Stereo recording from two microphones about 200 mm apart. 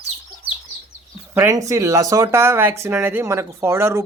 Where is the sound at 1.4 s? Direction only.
15° right (ahead or behind).